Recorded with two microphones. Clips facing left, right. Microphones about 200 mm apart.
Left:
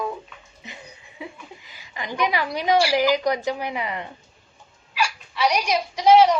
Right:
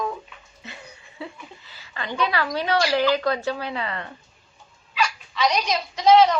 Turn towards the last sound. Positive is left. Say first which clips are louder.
# left 1 dB
turn(degrees=10)  # may be behind; listen again after turning